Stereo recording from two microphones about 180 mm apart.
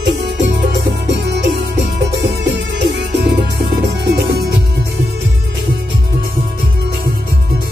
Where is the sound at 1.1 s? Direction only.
70° right (ahead or behind).